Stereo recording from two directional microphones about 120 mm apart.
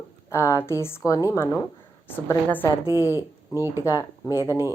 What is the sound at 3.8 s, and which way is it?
Speech, 25° left (ahead or behind).